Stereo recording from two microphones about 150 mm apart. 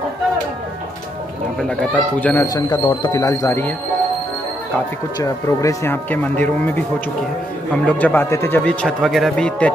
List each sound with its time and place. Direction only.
1.6 s speech: 5° left (ahead or behind)
2.4 s speech: 25° left (ahead or behind)
3.1 s speech: 20° left (ahead or behind)
5.2 s speech: 20° left (ahead or behind)
8.8 s speech: centre (ahead or behind)